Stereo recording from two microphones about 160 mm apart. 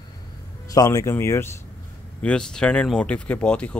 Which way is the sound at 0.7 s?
20° left (ahead or behind).